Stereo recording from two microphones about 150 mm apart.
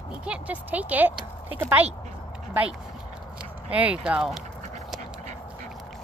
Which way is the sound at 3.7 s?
10° right (ahead or behind).